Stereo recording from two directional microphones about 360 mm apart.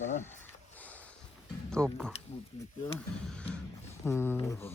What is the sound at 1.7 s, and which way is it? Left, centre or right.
Speech, centre.